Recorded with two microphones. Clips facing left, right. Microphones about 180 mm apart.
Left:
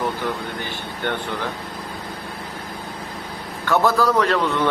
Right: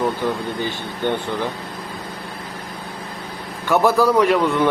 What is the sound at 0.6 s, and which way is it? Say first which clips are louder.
Speech: right 4 dB; 15° right (ahead or behind).